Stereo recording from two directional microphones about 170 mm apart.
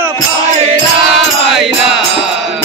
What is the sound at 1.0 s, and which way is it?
Music, centre (ahead or behind).